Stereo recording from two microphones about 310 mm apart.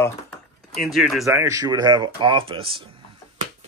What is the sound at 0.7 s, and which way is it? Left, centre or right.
Speech, centre.